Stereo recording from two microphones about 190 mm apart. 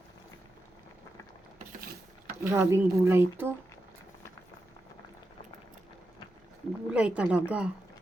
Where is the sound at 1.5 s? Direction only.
45° right (ahead or behind).